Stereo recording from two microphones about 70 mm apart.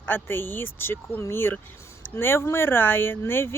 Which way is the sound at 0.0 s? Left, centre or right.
Left.